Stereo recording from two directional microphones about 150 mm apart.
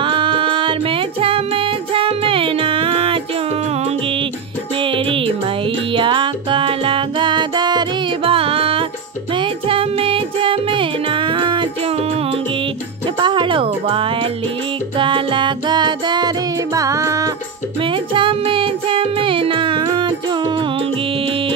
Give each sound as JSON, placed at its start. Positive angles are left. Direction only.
{"t": 0.0, "sound": "music", "side_deg": -35}
{"t": 4.8, "sound": "music", "side_deg": -35}
{"t": 13.2, "sound": "music", "side_deg": -35}
{"t": 17.8, "sound": "music", "side_deg": -35}